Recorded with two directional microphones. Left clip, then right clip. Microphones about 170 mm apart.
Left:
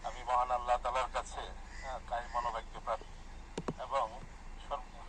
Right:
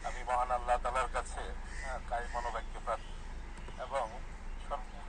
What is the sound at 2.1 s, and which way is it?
Vehicle, 15° right (ahead or behind).